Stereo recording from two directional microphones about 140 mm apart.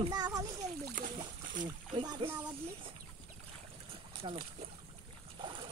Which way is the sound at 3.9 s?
40° right (ahead or behind).